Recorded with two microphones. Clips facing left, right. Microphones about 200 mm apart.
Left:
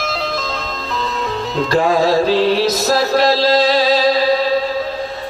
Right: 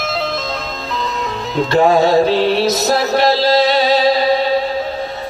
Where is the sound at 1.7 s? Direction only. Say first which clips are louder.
Right 3 dB; 25° right (ahead or behind).